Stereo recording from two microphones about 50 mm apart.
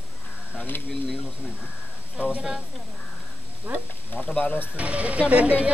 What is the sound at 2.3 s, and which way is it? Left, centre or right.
Speech, centre.